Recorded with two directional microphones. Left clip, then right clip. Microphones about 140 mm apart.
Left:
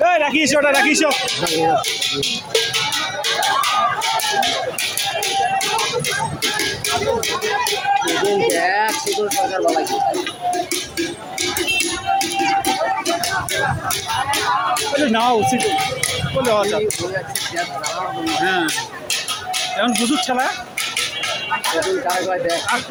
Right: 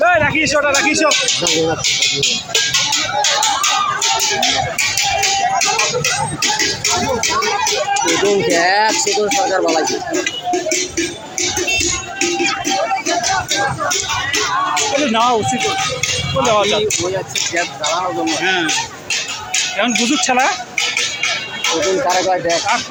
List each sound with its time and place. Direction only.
0.0 s a man's voice: 35° left (ahead or behind)
8.5 s music: 25° right (ahead or behind)
15.0 s speech: 25° left (ahead or behind)
16.5 s speech: 15° left (ahead or behind)
18.4 s speech: 10° left (ahead or behind)
20.2 s speech: 5° right (ahead or behind)